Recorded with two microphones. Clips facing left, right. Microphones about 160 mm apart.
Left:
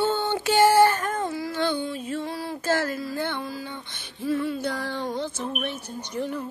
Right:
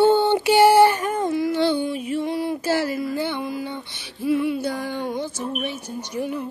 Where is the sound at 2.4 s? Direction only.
10° right (ahead or behind).